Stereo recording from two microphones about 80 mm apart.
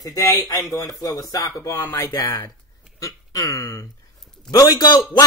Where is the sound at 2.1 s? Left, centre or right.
Left.